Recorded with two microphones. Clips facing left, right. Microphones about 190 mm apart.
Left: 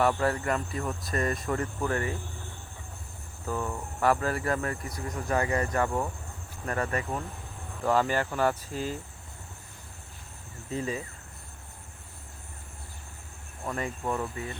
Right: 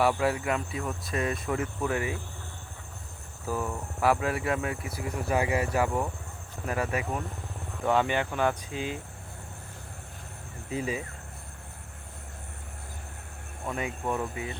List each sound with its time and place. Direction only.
0.0 s speech: 5° right (ahead or behind)
3.4 s speech: 5° right (ahead or behind)
8.7 s speech: 40° left (ahead or behind)
10.7 s speech: 10° right (ahead or behind)
13.7 s speech: 5° right (ahead or behind)